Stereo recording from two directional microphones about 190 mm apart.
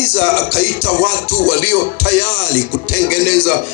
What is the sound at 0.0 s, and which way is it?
Music, 50° right (ahead or behind).